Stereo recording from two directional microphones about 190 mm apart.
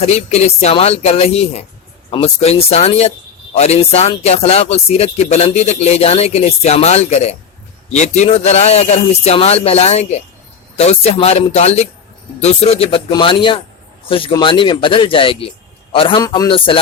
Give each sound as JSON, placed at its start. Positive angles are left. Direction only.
{"t": 0.0, "sound": "speech", "side_deg": 35}